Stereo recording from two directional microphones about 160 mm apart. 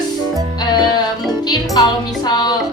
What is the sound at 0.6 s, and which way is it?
A woman's voice, 25° left (ahead or behind).